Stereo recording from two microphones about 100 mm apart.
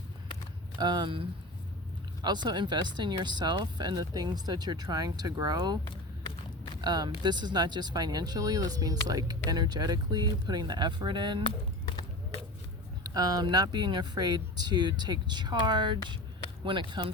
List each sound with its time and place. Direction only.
0.8 s speech: 50° right (ahead or behind)
2.2 s speech: 45° right (ahead or behind)
6.8 s speech: 45° right (ahead or behind)
13.0 s speech: 40° right (ahead or behind); by 17.1 s 55° right (ahead or behind)